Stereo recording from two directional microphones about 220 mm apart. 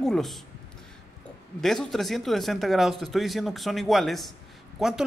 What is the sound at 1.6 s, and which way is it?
Speech, centre (ahead or behind).